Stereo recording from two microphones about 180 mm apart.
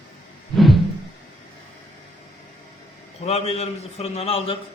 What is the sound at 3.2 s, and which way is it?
A man's voice, 35° left (ahead or behind).